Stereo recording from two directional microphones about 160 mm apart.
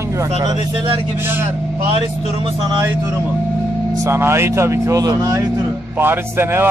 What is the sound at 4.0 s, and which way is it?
A man's voice, 15° right (ahead or behind).